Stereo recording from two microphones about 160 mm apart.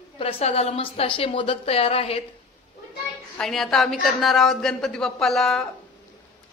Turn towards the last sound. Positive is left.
turn(degrees=5)  # may be behind; listen again after turning